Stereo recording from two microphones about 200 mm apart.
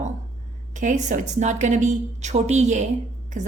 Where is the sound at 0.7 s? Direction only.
40° right (ahead or behind).